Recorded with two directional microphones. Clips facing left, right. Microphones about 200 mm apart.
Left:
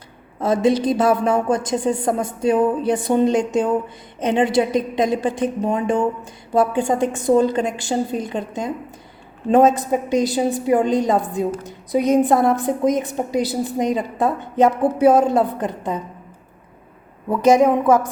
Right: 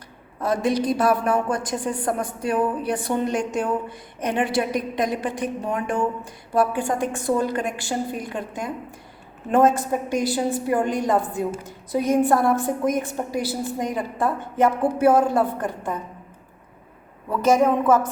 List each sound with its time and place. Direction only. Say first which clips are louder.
0.3 s a woman's voice: left 5 dB; 25° left (ahead or behind)
17.2 s a woman's voice: left 4 dB; 15° left (ahead or behind)